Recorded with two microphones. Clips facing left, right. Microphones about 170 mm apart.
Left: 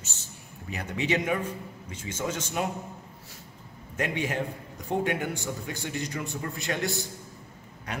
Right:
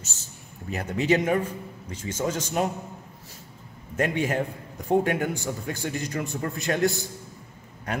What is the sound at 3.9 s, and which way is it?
Speech, 45° right (ahead or behind).